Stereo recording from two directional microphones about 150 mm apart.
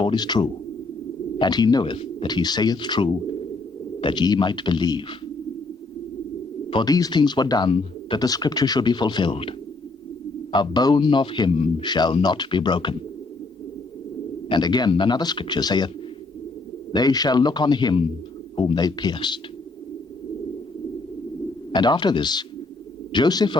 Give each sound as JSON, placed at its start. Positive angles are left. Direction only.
{"t": 0.0, "sound": "a man's voice", "side_deg": 30}
{"t": 6.7, "sound": "a man's voice", "side_deg": 30}
{"t": 14.5, "sound": "speech", "side_deg": 30}
{"t": 16.9, "sound": "speech", "side_deg": 25}
{"t": 21.7, "sound": "speech", "side_deg": 30}